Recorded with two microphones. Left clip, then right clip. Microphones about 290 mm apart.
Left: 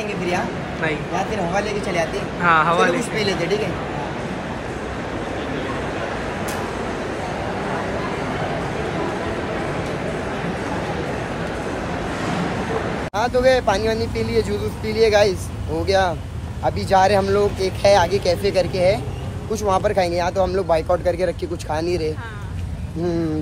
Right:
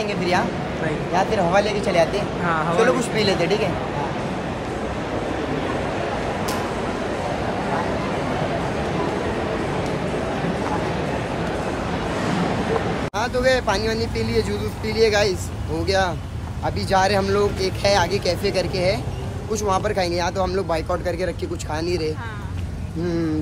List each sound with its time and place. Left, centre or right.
0.3 s speech: centre
13.1 s speech: centre